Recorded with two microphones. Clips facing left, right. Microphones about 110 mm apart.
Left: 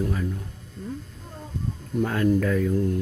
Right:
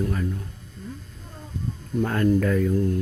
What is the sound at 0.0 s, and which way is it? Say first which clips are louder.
Speech: right 1 dB; 10° left (ahead or behind).